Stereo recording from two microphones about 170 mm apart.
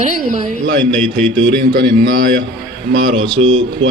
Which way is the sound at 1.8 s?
60° right (ahead or behind).